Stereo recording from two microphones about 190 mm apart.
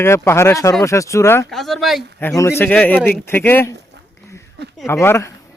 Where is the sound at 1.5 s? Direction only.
Centre (ahead or behind).